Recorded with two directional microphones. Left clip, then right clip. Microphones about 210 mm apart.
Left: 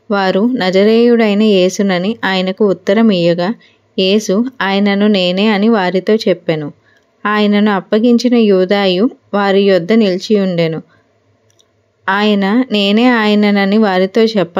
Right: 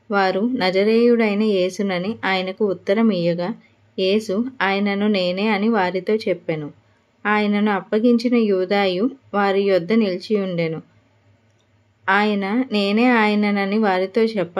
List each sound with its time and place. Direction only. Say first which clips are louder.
0.1 s speech: left 6 dB; 30° left (ahead or behind)
12.0 s speech: left 5 dB; 35° left (ahead or behind)